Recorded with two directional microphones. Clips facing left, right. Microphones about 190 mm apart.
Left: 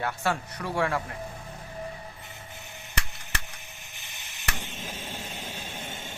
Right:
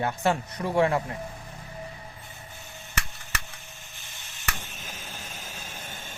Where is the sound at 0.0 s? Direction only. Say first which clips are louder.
Right 3 dB; 20° right (ahead or behind).